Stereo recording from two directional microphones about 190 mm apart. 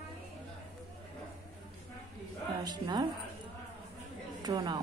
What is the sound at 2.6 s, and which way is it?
Speech, 20° right (ahead or behind).